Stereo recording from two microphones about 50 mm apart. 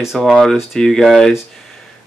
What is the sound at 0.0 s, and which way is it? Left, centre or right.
Speech, centre.